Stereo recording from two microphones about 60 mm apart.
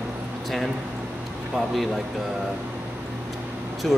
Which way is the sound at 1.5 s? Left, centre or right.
Centre.